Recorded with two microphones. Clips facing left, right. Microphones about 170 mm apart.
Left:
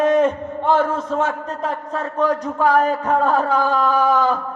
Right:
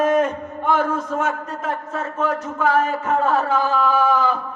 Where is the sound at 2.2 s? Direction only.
35° left (ahead or behind).